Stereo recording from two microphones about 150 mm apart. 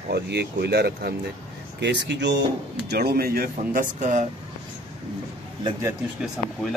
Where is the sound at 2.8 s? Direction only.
90° right; by 4.2 s 55° right (ahead or behind).